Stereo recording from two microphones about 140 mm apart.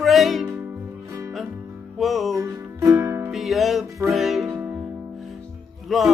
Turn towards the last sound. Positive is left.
turn(degrees=0)  # may be behind; listen again after turning